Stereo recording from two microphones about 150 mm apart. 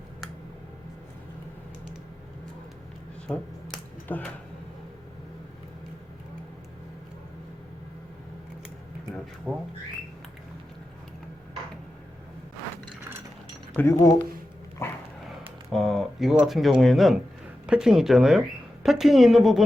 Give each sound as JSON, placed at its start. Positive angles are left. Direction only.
{"t": 3.2, "sound": "a sound", "side_deg": 5}
{"t": 9.5, "sound": "speech", "side_deg": 0}
{"t": 13.7, "sound": "speech", "side_deg": 20}
{"t": 14.8, "sound": "dog", "side_deg": 15}
{"t": 15.7, "sound": "speech", "side_deg": 0}